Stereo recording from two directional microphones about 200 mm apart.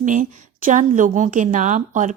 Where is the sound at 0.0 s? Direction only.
40° right (ahead or behind).